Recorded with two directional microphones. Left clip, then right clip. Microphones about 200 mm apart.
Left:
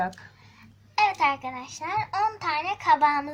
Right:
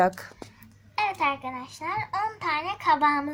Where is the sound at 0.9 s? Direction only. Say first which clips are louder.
Left 3 dB; 5° left (ahead or behind).